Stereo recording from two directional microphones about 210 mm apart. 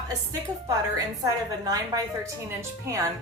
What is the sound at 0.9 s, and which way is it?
A woman's voice, 15° right (ahead or behind).